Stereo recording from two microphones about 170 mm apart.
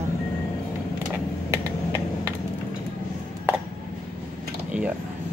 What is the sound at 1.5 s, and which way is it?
Typing, 15° right (ahead or behind).